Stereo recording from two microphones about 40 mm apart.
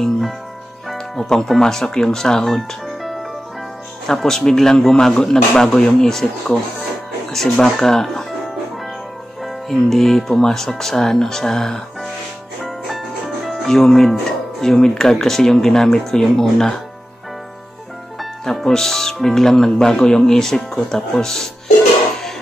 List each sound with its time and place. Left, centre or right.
0.9 s speech: centre
2.5 s music: centre
4.1 s speech: centre
9.4 s speech: centre
12.6 s music: centre
13.7 s speech: centre
18.4 s speech: centre